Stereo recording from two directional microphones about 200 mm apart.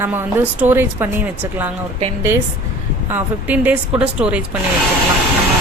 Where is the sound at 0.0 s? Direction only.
10° right (ahead or behind).